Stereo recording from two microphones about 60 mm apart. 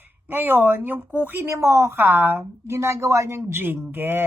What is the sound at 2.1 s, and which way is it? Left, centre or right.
Speech, right.